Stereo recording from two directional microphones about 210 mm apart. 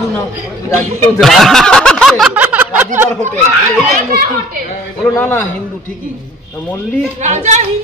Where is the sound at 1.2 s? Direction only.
Centre (ahead or behind).